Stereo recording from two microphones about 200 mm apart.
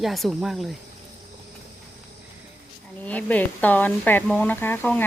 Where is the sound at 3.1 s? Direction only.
5° left (ahead or behind).